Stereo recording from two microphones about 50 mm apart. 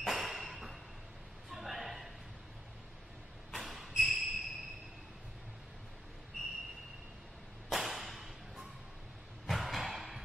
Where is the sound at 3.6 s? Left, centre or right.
Centre.